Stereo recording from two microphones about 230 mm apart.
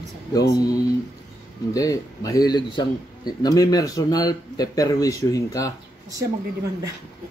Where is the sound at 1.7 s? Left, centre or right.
Centre.